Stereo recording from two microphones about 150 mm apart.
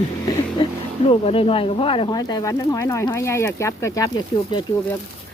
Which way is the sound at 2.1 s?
25° left (ahead or behind).